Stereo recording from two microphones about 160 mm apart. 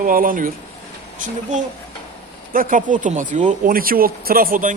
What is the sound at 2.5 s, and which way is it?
Speech, 60° right (ahead or behind).